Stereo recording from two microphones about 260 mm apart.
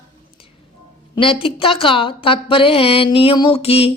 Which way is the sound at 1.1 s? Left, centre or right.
Centre.